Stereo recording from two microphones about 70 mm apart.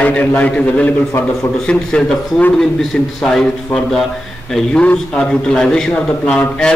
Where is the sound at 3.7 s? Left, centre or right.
Left.